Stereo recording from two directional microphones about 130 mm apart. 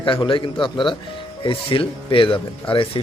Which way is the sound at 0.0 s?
40° left (ahead or behind).